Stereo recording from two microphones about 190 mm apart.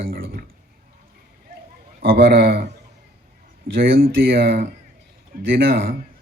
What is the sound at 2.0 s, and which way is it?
Speech, 55° right (ahead or behind).